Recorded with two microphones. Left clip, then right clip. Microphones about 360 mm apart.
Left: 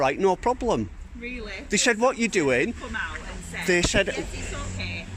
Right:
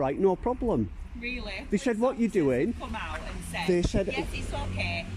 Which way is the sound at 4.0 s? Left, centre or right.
Left.